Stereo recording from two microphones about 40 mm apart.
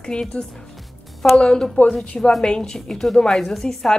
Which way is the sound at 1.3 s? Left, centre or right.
Left.